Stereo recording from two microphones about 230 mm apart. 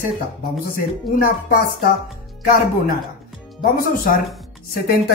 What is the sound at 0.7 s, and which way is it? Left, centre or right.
Speech, left.